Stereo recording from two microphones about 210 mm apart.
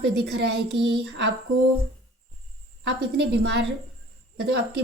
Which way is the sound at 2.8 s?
55° right (ahead or behind).